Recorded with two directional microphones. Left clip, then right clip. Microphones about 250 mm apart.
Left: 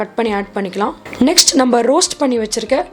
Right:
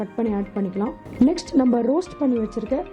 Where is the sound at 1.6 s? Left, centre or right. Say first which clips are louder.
Left 8 dB; centre.